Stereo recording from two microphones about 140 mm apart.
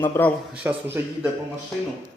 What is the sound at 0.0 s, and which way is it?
Speech, 15° left (ahead or behind).